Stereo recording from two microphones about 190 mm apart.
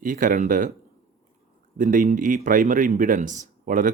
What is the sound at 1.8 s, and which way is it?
A man's voice, 45° right (ahead or behind).